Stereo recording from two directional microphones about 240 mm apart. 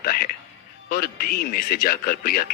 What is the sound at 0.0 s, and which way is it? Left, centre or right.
Speech, left.